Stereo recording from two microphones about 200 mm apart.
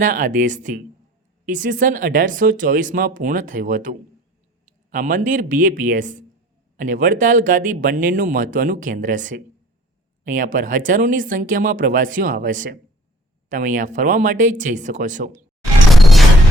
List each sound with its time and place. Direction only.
0.0 s speech: 40° right (ahead or behind)
16.0 s music: centre (ahead or behind)